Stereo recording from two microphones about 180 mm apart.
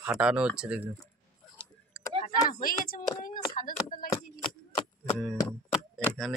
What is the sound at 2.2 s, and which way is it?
Speech, 50° left (ahead or behind).